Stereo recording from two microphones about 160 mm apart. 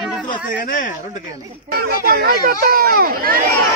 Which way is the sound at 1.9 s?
70° right (ahead or behind).